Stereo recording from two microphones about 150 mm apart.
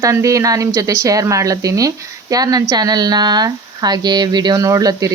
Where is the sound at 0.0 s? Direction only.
20° right (ahead or behind).